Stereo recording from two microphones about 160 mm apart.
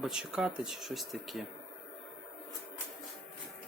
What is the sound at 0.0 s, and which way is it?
Speech, 5° right (ahead or behind).